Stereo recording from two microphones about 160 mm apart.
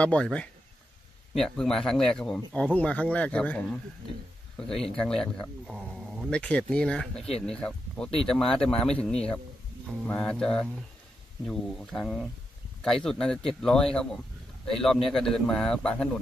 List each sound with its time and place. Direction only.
0.0 s speech: 5° left (ahead or behind)